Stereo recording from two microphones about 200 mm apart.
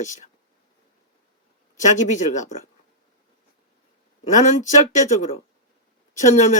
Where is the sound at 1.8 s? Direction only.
35° left (ahead or behind).